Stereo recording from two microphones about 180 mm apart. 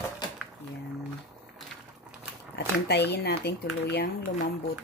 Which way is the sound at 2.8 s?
65° left (ahead or behind).